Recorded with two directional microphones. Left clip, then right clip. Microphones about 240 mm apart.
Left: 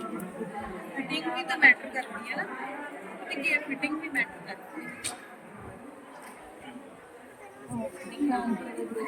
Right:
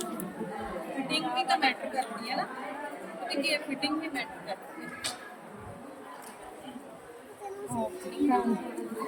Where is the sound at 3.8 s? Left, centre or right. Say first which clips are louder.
Left 3 dB; right.